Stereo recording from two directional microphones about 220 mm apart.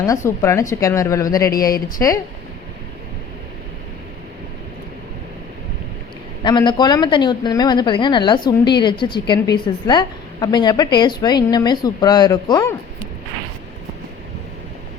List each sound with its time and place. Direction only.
0.0 s speech: 15° left (ahead or behind)
6.4 s speech: 20° left (ahead or behind)